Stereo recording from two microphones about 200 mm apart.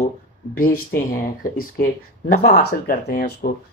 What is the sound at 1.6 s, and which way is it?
Speech, 45° left (ahead or behind).